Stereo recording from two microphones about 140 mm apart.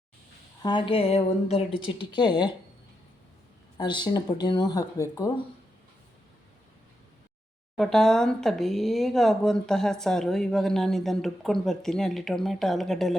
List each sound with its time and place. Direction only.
0.6 s a woman's voice: 35° left (ahead or behind)
3.8 s a woman's voice: 35° left (ahead or behind)
7.8 s speech: 5° left (ahead or behind)